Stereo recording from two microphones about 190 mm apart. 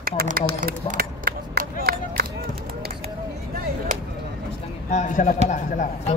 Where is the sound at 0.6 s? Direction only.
45° right (ahead or behind).